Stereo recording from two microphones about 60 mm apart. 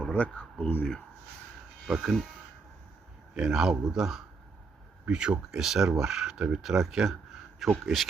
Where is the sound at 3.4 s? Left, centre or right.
Centre.